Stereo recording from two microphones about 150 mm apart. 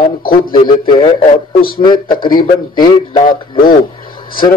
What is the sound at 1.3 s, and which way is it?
Speech, 75° left (ahead or behind).